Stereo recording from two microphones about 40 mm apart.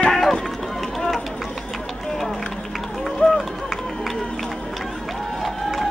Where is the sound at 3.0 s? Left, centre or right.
Centre.